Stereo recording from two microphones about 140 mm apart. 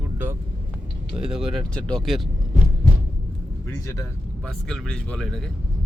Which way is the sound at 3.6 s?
20° left (ahead or behind).